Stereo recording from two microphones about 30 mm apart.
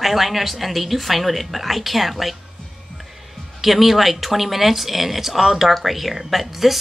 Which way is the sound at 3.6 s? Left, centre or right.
Centre.